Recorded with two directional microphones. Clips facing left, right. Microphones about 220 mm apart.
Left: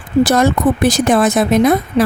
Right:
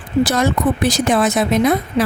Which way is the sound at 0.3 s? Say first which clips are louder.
Left 4 dB; 50° left (ahead or behind).